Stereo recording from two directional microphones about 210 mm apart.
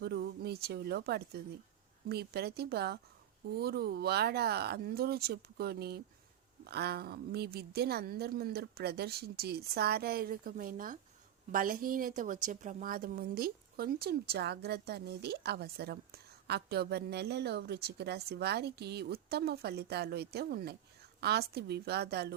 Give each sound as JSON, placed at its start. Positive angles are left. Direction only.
{"t": 0.0, "sound": "a woman's voice", "side_deg": -50}